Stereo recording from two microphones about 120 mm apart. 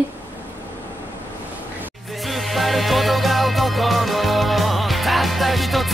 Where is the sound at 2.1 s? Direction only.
Centre (ahead or behind).